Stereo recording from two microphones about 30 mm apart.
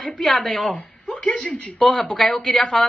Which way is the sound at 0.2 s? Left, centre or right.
Centre.